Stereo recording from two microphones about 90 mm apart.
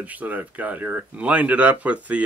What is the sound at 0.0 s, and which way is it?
Speech, 20° right (ahead or behind).